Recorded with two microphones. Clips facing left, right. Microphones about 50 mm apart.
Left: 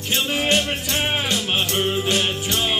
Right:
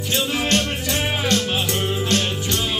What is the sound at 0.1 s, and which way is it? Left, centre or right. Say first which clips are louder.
Music: left 1 dB; centre.